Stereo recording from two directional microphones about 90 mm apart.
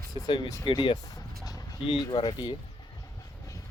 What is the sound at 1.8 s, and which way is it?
Speech, 55° left (ahead or behind).